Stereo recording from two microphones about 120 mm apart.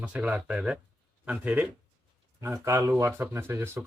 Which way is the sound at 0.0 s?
10° right (ahead or behind).